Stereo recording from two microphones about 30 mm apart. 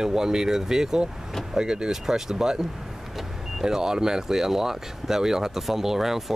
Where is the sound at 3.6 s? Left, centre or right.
Right.